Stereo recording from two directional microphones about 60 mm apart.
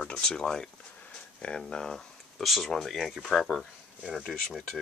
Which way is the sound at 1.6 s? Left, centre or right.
Centre.